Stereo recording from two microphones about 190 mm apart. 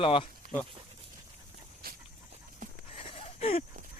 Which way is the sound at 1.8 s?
50° right (ahead or behind).